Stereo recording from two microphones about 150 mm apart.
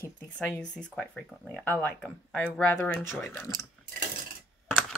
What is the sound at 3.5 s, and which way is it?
Speech, 20° left (ahead or behind).